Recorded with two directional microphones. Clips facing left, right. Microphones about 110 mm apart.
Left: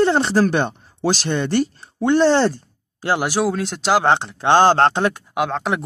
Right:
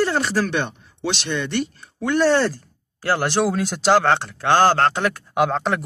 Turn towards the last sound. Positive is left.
turn(degrees=0)  # may be behind; listen again after turning